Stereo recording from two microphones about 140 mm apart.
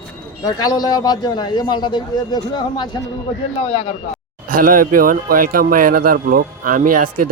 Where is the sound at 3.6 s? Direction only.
50° left (ahead or behind).